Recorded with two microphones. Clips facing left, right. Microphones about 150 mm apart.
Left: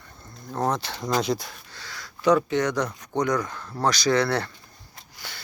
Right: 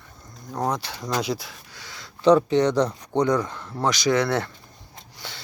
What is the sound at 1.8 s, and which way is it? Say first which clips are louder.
Speech: right 4 dB; 25° right (ahead or behind).